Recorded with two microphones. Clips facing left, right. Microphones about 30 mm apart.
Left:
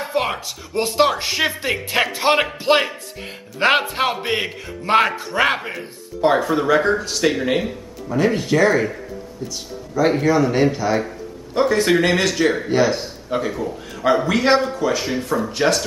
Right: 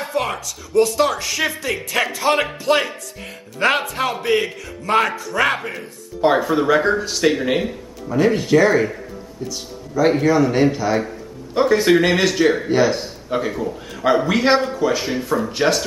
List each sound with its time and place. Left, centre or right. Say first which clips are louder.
0.2 s a sound: left 1 dB; left
0.5 s a man's voice: right 6 dB; left
5.6 s speech: even; centre